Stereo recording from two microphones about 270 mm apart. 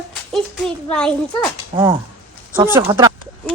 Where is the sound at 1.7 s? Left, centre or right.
Centre.